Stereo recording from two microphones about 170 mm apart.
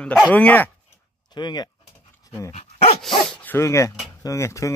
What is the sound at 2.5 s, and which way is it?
Dog, 40° left (ahead or behind).